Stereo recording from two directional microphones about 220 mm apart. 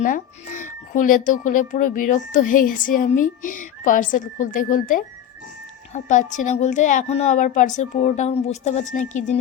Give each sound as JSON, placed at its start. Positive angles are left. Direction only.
{"t": 0.0, "sound": "speech", "side_deg": 35}